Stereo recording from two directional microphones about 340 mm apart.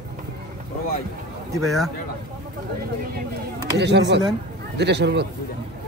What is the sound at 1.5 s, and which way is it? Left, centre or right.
Speech, centre.